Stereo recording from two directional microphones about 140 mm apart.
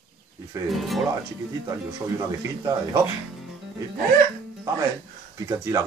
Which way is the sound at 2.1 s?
25° right (ahead or behind).